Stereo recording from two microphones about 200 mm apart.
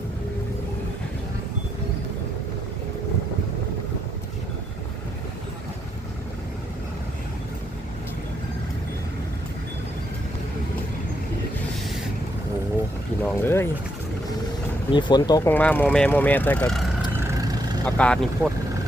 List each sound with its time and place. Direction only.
13.2 s boat: 10° left (ahead or behind)
14.9 s speech: 20° left (ahead or behind)
15.4 s speech: 10° left (ahead or behind)
17.1 s vehicle: 10° right (ahead or behind)
17.8 s speech: 5° left (ahead or behind)